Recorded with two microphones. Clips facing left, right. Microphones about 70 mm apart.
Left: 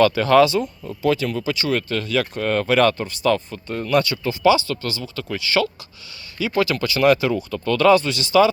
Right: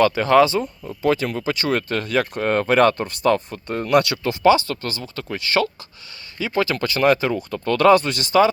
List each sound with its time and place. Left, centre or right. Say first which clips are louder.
0.0 s speech: even; right
1.0 s speech: even; right
2.4 s speech: right 1 dB; right
4.4 s speech: right 1 dB; right
6.4 s speech: left 1 dB; right
7.8 s speech: right 1 dB; right